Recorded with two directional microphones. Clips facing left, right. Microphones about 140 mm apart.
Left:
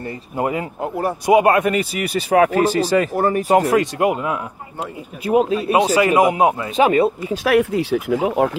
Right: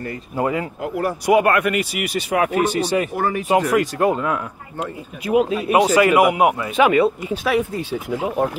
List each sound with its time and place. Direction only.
0.0 s speech: 25° left (ahead or behind)
5.2 s a man's voice: 35° left (ahead or behind)
7.4 s speech: 75° left (ahead or behind); by 8.5 s 90° left